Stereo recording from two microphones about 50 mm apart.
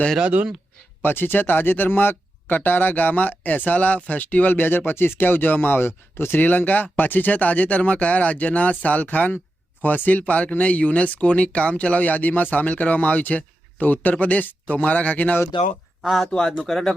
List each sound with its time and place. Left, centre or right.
0.2 s speech: right
1.0 s speech: left
6.4 s speech: left
16.0 s speech: centre